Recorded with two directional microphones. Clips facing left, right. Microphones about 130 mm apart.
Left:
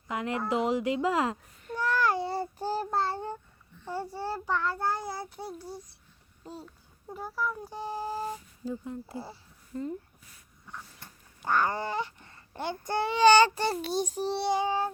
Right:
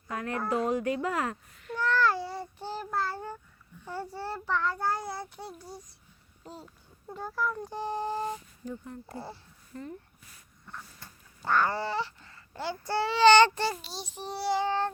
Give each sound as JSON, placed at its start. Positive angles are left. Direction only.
{"t": 0.1, "sound": "speech", "side_deg": 20}
{"t": 1.8, "sound": "child singing", "side_deg": 15}
{"t": 2.4, "sound": "child singing", "side_deg": 40}
{"t": 3.8, "sound": "a child's voice", "side_deg": 15}
{"t": 4.8, "sound": "speech", "side_deg": 0}
{"t": 5.4, "sound": "child singing", "side_deg": 10}
{"t": 7.1, "sound": "speech", "side_deg": 5}
{"t": 8.7, "sound": "child singing", "side_deg": 15}
{"t": 9.1, "sound": "speech", "side_deg": 0}
{"t": 11.0, "sound": "speech", "side_deg": 15}
{"t": 13.8, "sound": "a child's voice", "side_deg": 50}
{"t": 14.3, "sound": "child singing", "side_deg": 20}